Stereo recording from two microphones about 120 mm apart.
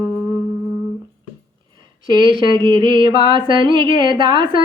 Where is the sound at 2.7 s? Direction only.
40° right (ahead or behind).